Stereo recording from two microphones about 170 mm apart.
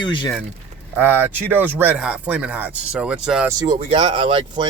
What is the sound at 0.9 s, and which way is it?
Speech, 10° right (ahead or behind).